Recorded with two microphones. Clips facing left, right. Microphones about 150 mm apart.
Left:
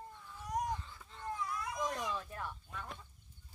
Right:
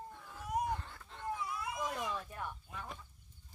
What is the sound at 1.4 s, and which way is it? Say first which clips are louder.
Cat: left 1 dB; 5° right (ahead or behind).